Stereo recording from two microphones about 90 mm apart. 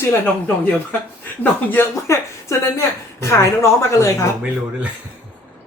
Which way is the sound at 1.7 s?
30° left (ahead or behind).